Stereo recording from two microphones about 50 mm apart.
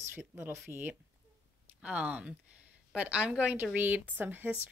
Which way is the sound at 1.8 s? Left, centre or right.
Right.